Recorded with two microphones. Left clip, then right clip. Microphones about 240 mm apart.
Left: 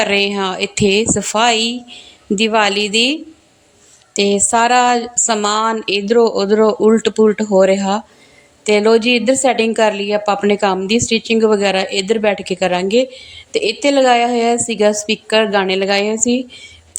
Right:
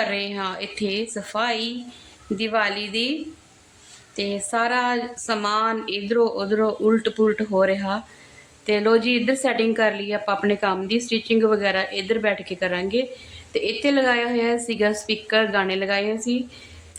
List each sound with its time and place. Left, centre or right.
0.0 s a woman's voice: left